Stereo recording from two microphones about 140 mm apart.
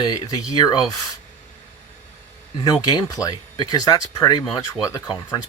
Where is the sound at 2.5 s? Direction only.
30° left (ahead or behind).